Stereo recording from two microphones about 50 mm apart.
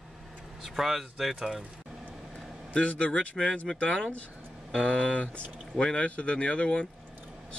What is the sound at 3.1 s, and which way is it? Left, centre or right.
Speech, centre.